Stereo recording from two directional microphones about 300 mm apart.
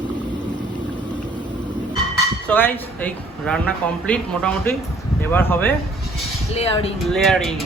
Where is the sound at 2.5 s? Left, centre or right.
Centre.